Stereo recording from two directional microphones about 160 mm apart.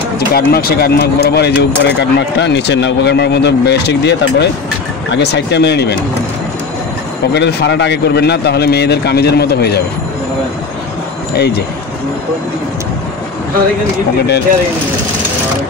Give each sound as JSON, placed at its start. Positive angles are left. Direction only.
{"t": 0.3, "sound": "speech", "side_deg": 70}
{"t": 7.3, "sound": "speech", "side_deg": 90}
{"t": 11.3, "sound": "speech", "side_deg": 90}